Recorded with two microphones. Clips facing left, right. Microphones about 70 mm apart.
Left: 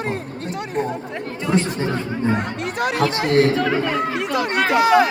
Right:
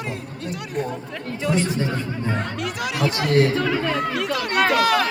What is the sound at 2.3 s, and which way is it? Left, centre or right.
Speech, centre.